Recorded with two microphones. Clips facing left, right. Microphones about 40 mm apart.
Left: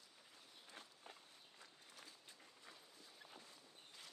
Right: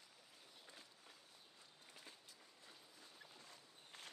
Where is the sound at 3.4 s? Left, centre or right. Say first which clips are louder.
Even; right.